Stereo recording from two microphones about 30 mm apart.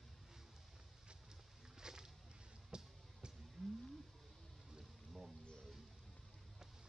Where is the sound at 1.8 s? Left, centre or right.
Right.